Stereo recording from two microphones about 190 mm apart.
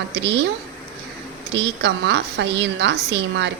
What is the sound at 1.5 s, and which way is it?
A woman's voice, 65° right (ahead or behind).